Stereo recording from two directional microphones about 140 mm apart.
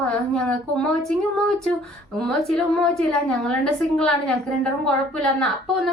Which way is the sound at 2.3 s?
5° left (ahead or behind).